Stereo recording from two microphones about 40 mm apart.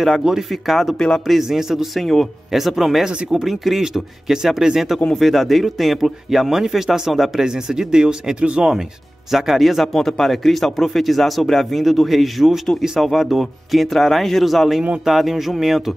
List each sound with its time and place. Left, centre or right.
0.2 s a man's voice: centre
0.5 s speech: centre
0.9 s speech: centre
1.2 s a man's voice: centre
3.1 s speech: right
3.3 s speech: centre
3.8 s a man's voice: centre
5.1 s speech: centre
7.4 s speech: centre
9.3 s a man's voice: centre